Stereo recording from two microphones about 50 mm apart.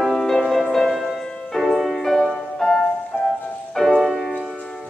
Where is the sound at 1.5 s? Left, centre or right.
Centre.